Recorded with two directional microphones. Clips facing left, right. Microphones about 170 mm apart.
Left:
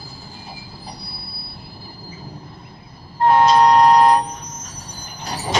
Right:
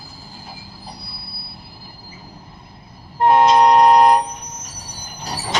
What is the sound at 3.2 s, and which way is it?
Vehicle, 20° right (ahead or behind).